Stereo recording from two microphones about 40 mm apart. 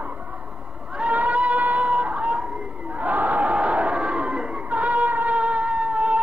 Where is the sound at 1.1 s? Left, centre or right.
Right.